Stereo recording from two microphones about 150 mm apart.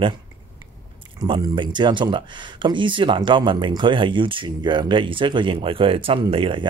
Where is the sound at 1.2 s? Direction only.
30° right (ahead or behind).